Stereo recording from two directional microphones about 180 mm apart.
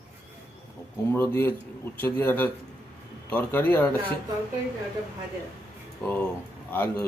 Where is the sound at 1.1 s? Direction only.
10° left (ahead or behind).